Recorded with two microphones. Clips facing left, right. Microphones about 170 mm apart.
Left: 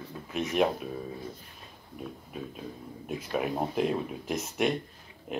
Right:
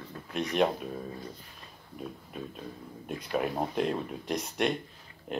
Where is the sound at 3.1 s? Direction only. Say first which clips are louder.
Even; 5° left (ahead or behind).